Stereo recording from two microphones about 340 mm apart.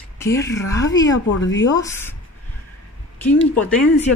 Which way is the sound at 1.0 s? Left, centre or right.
Left.